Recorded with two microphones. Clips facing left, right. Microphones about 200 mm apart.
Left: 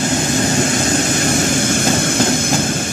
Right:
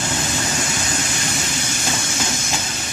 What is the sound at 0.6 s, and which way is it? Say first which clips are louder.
Vehicle: left 10 dB; 55° left (ahead or behind).